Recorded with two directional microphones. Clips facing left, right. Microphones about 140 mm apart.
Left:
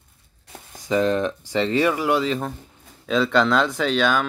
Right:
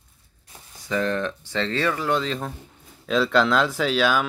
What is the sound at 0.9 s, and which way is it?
Speech, 15° left (ahead or behind).